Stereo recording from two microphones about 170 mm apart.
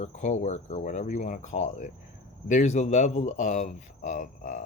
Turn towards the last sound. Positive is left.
turn(degrees=45)  # may be behind; listen again after turning